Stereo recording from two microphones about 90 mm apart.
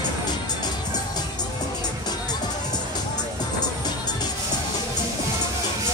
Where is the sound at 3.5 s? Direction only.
50° left (ahead or behind).